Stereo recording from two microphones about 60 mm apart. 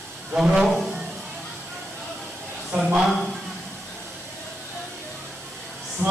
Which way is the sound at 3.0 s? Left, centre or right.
Centre.